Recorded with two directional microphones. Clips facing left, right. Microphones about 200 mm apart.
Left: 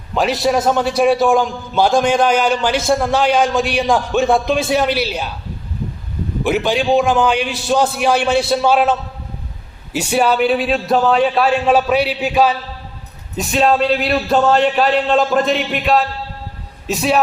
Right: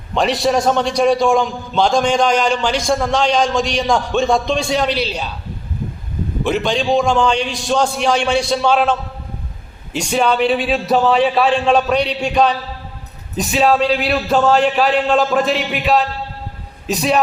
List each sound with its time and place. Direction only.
0.1 s a man's voice: centre (ahead or behind)
6.4 s a man's voice: 5° left (ahead or behind)